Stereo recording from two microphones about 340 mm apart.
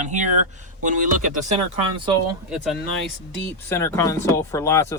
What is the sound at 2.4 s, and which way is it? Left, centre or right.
Speech, centre.